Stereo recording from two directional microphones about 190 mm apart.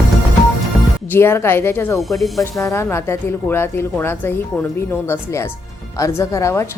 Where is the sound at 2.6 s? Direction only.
15° left (ahead or behind).